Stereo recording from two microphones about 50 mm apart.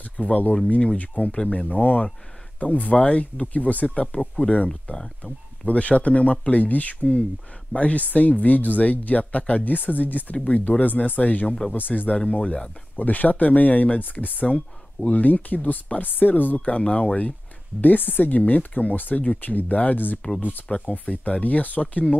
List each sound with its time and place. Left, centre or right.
0.2 s speech: left
16.6 s speech: left